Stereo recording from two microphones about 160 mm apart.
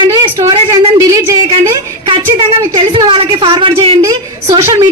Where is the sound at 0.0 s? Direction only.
30° right (ahead or behind).